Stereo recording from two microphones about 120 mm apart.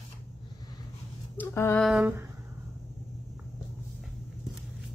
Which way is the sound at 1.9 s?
10° right (ahead or behind).